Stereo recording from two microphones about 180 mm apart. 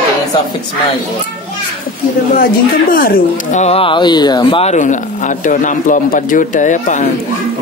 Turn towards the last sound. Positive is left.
turn(degrees=45)  # may be behind; listen again after turning